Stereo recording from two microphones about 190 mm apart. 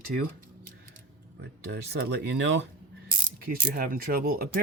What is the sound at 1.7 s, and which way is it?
Speech, 60° right (ahead or behind).